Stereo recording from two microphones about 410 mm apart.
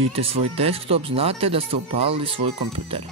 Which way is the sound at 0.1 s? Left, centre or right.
Centre.